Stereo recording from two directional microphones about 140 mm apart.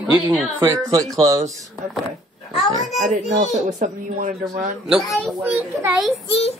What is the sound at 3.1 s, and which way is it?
Speech, 60° right (ahead or behind).